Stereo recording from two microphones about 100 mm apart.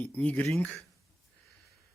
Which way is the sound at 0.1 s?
15° left (ahead or behind).